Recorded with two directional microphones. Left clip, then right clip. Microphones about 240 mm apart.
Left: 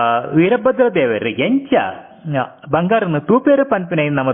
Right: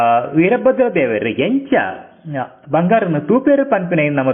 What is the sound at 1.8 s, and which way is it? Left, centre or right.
A man's voice, centre.